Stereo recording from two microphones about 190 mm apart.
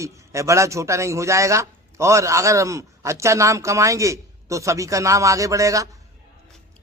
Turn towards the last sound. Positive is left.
turn(degrees=-15)  # may be behind; listen again after turning